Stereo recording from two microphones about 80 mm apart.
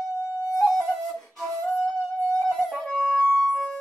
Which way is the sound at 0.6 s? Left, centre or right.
Centre.